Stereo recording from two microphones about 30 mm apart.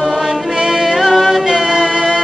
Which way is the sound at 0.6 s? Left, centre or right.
Centre.